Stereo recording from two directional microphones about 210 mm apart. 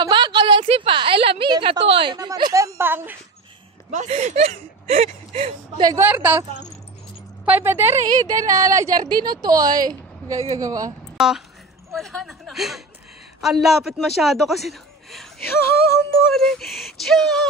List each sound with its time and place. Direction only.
0.0 s a woman's voice: 20° right (ahead or behind)
3.9 s speech: 35° right (ahead or behind)
5.9 s a woman's voice: 10° right (ahead or behind)
7.4 s a woman's voice: 10° right (ahead or behind)
11.1 s a man's voice: centre (ahead or behind)